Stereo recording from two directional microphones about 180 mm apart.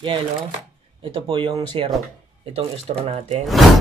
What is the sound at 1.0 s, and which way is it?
Speech, 30° right (ahead or behind).